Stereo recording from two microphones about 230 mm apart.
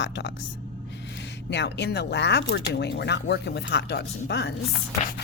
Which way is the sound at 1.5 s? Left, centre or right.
Left.